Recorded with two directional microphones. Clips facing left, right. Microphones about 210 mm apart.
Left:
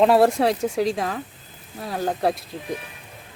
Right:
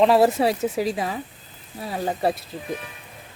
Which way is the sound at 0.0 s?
Centre (ahead or behind).